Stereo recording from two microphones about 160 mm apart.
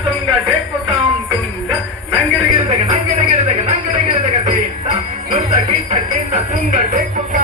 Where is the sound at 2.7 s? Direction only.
45° right (ahead or behind).